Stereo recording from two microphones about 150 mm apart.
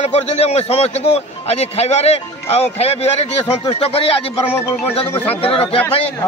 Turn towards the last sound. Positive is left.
turn(degrees=40)  # may be behind; listen again after turning